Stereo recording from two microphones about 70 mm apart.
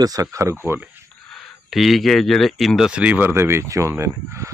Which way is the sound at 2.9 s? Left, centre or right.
Right.